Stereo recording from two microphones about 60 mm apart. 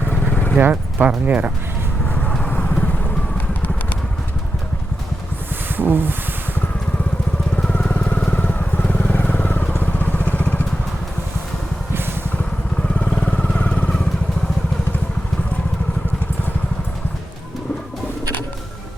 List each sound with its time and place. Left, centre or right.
0.1 s vehicle: left
0.6 s speech: right
2.5 s vehicle: left
5.7 s a sound: right
7.5 s vehicle: centre
12.9 s vehicle: centre